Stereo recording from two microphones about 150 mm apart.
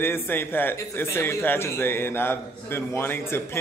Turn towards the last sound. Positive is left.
turn(degrees=15)  # may be behind; listen again after turning